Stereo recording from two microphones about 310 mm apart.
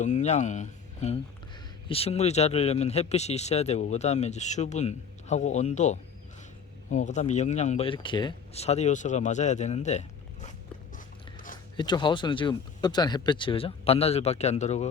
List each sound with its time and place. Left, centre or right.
0.0 s speech: left
11.8 s speech: centre